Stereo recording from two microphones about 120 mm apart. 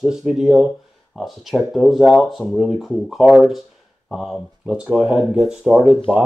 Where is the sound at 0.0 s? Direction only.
5° right (ahead or behind).